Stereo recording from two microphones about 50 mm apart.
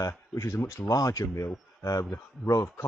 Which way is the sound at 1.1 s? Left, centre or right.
Left.